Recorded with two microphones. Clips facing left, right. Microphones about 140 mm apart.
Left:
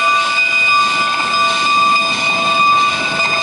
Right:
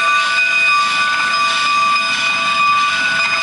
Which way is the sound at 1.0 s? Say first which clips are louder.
Left 2 dB; 25° left (ahead or behind).